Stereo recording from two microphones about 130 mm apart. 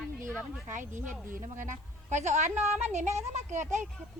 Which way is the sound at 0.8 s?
75° right (ahead or behind).